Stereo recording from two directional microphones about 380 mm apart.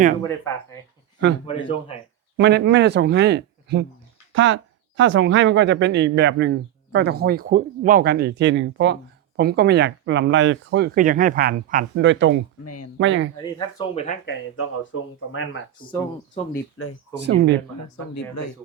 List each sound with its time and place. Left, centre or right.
0.2 s speech: centre
2.4 s speech: right
12.6 s speech: left
13.0 s speech: right
13.4 s speech: centre
14.3 s speech: left
15.9 s speech: centre
16.8 s speech: left
17.2 s speech: right
17.7 s speech: left